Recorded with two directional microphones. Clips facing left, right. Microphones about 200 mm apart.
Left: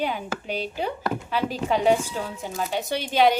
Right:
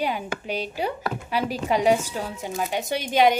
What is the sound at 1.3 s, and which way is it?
Speech, 10° right (ahead or behind).